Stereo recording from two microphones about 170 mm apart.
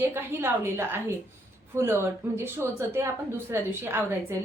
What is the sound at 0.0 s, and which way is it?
A woman's voice, 15° right (ahead or behind).